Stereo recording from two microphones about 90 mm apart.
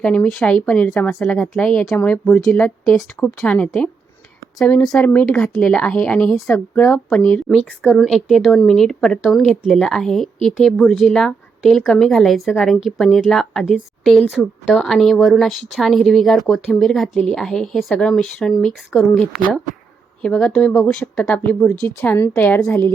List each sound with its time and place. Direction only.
0.0 s speech: 15° left (ahead or behind)
4.9 s speech: 15° left (ahead or behind)
7.9 s a woman's voice: centre (ahead or behind); by 22.9 s 20° left (ahead or behind)